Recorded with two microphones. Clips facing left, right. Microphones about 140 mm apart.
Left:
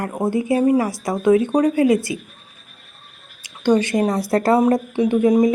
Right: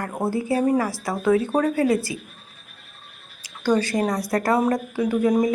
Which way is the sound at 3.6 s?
20° left (ahead or behind).